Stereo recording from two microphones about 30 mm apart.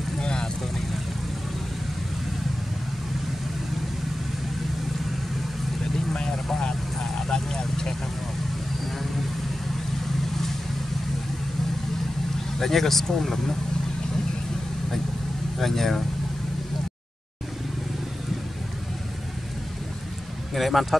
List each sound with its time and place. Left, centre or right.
0.2 s vehicle: left
6.2 s vehicle: left
12.5 s speech: centre
15.6 s speech: centre
20.5 s speech: centre